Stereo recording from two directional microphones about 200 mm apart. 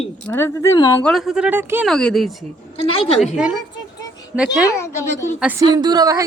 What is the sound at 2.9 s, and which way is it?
Speech, 30° left (ahead or behind).